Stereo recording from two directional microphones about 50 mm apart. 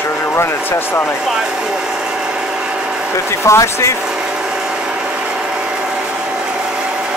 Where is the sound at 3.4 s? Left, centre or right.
Left.